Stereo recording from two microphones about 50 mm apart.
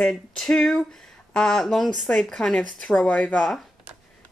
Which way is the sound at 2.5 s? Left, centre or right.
Left.